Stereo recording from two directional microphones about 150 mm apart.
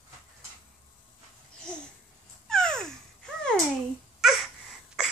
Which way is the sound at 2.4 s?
5° left (ahead or behind).